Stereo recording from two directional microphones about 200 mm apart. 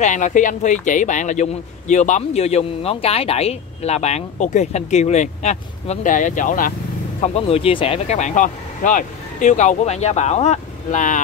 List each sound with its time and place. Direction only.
0.0 s a man's voice: 40° left (ahead or behind)